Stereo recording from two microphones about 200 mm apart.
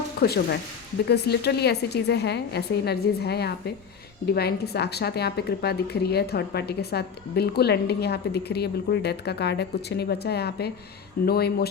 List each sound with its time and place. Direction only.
0.2 s a woman's voice: 50° left (ahead or behind)